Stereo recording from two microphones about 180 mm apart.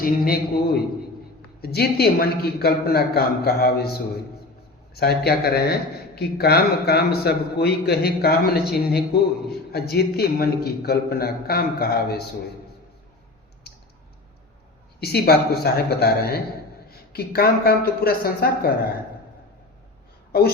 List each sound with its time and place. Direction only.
0.0 s a man's voice: 55° left (ahead or behind)
4.9 s a man's voice: 60° left (ahead or behind)
13.7 s typing: 60° left (ahead or behind)
15.0 s a man's voice: 60° left (ahead or behind)
20.3 s a man's voice: 55° left (ahead or behind)